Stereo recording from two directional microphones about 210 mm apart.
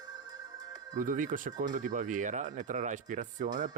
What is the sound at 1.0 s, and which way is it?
Speech, 40° right (ahead or behind).